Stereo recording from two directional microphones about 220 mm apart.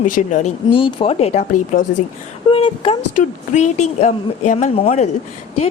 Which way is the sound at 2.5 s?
25° left (ahead or behind).